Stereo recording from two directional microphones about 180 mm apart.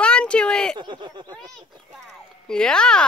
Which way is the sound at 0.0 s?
5° left (ahead or behind).